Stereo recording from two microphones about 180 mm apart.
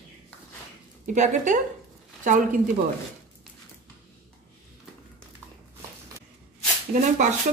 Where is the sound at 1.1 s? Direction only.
45° right (ahead or behind).